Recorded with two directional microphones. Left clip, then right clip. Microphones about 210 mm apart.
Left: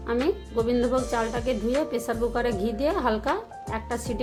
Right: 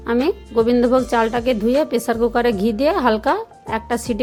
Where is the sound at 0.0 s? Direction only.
35° right (ahead or behind).